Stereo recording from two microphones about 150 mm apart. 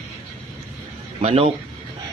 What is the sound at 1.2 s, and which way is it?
Speech, 45° right (ahead or behind).